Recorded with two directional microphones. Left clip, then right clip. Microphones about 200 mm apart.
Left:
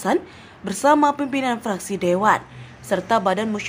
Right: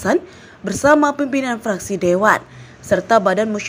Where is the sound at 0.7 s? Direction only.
10° right (ahead or behind).